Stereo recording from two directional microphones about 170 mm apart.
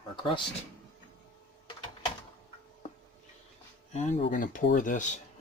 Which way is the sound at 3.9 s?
40° left (ahead or behind).